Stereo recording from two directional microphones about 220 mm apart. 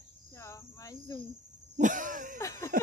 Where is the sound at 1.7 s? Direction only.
35° right (ahead or behind).